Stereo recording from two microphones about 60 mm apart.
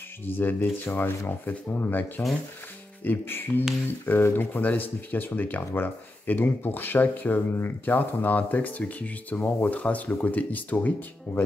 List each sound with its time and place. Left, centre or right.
0.4 s speech: left